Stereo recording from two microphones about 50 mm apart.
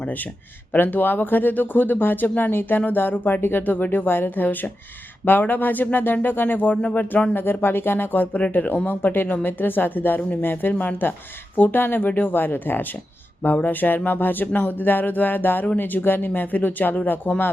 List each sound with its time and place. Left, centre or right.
0.7 s speech: left
8.9 s speech: left